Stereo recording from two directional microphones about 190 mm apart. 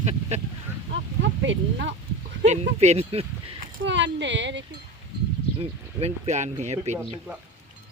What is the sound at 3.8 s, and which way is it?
Speech, 70° right (ahead or behind).